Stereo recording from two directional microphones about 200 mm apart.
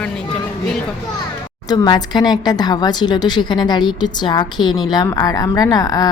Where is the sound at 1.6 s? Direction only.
20° left (ahead or behind).